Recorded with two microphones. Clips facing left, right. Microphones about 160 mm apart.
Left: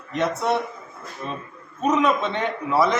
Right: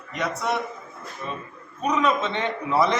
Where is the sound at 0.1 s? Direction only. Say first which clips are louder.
Left 4 dB; 25° left (ahead or behind).